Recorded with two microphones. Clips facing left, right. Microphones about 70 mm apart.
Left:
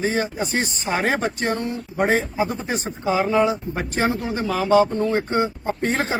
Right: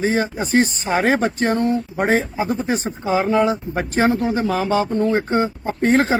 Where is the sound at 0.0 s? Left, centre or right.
Right.